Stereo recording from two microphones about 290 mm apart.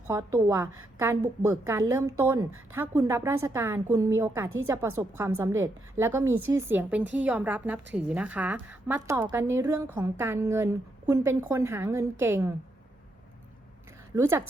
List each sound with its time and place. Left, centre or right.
0.1 s a woman's voice: centre
4.4 s a woman's voice: right
4.7 s a woman's voice: centre
14.2 s a woman's voice: centre